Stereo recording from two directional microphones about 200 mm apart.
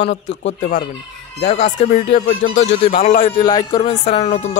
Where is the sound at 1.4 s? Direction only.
35° left (ahead or behind).